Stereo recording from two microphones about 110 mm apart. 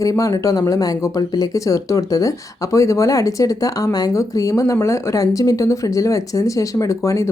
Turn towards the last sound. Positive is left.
turn(degrees=30)  # may be behind; listen again after turning